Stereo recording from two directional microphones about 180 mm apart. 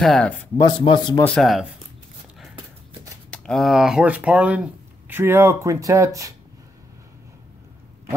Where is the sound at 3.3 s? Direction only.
Centre (ahead or behind); by 6.3 s 15° right (ahead or behind).